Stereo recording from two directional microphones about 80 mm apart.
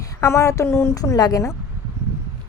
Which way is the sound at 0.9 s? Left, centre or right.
Left.